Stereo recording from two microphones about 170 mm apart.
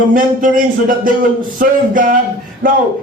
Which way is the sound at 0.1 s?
55° right (ahead or behind).